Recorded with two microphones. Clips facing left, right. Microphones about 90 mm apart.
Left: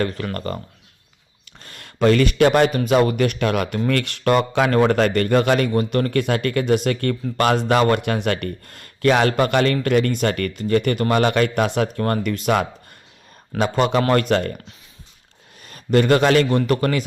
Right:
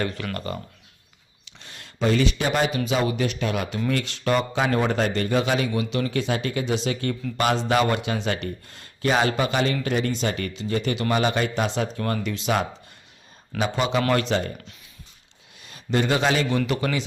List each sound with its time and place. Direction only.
0.0 s a man's voice: 40° left (ahead or behind); by 14.5 s 60° left (ahead or behind)
15.6 s speech: 55° left (ahead or behind)